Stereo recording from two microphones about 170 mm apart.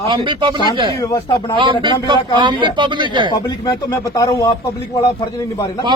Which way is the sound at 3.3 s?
20° left (ahead or behind).